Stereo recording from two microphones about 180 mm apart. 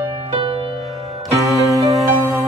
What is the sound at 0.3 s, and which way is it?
Music, 30° right (ahead or behind).